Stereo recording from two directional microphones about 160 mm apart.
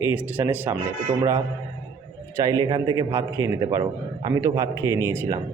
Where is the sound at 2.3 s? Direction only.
25° right (ahead or behind).